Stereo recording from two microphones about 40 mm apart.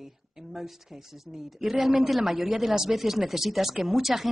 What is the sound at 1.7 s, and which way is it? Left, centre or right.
Speech, right.